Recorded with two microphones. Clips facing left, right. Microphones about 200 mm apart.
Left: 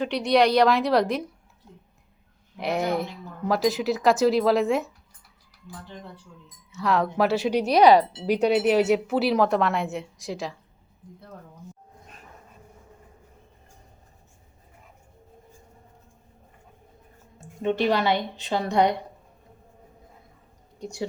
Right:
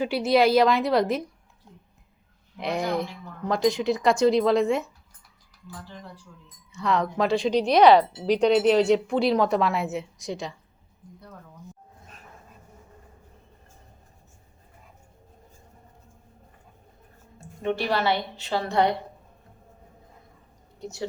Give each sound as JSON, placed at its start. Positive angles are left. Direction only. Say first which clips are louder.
{"t": 0.0, "sound": "speech", "louder": "even", "side_deg": -5}
{"t": 2.6, "sound": "speech", "louder": "left 1 dB", "side_deg": 0}
{"t": 6.7, "sound": "speech", "louder": "left 1 dB", "side_deg": 0}
{"t": 17.4, "sound": "a woman's voice", "louder": "left 4 dB", "side_deg": 15}
{"t": 20.7, "sound": "speech", "louder": "left 1 dB", "side_deg": 15}